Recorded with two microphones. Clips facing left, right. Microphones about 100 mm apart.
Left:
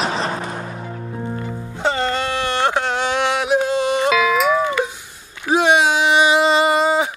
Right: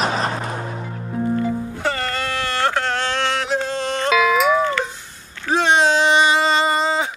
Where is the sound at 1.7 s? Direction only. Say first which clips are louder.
Left 3 dB; 20° left (ahead or behind).